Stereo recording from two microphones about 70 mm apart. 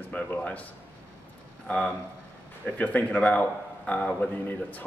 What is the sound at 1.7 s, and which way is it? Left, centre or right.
Speech, centre.